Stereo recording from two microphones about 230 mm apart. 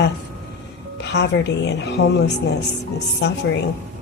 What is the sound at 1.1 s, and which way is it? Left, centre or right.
A woman's voice, left.